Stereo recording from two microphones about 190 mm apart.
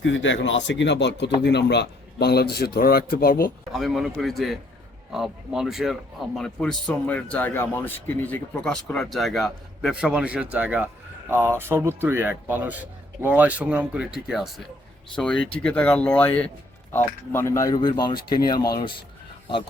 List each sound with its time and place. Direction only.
0.0 s speech: 80° left; by 3.5 s 50° left (ahead or behind)
3.7 s a man's voice: centre (ahead or behind); by 18.3 s 20° left (ahead or behind)